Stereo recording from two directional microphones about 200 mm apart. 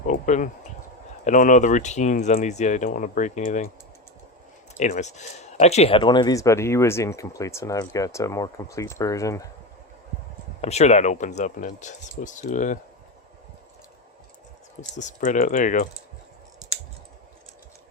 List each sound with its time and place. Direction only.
0.1 s speech: 40° left (ahead or behind)
4.7 s speech: 35° left (ahead or behind); by 9.5 s 15° left (ahead or behind)
10.6 s speech: 35° left (ahead or behind)
14.8 s speech: 35° left (ahead or behind)